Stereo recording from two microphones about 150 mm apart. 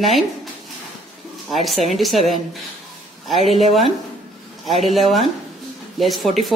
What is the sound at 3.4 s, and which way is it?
Speech, 45° right (ahead or behind).